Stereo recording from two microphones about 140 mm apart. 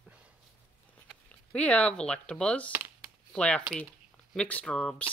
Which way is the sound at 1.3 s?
10° left (ahead or behind).